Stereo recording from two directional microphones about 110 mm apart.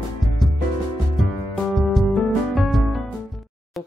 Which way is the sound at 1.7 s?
Centre (ahead or behind).